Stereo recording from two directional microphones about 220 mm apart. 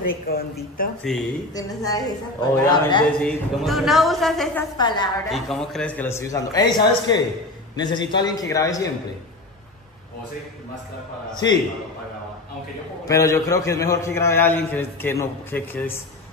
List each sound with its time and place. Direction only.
0.3 s a woman's voice: 45° left (ahead or behind)
1.1 s a woman's voice: centre (ahead or behind)
1.5 s a man's voice: 15° left (ahead or behind)
3.2 s a woman's voice: centre (ahead or behind)
4.7 s a woman's voice: 20° left (ahead or behind)
5.3 s a man's voice: centre (ahead or behind)
13.1 s a man's voice: 15° left (ahead or behind)